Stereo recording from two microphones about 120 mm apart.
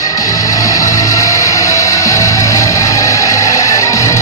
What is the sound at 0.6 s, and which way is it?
Music, 30° left (ahead or behind).